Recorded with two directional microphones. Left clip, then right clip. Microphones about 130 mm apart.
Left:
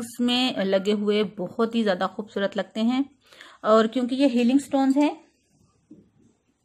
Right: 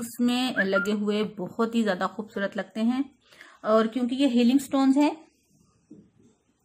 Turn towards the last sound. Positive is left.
turn(degrees=10)  # may be behind; listen again after turning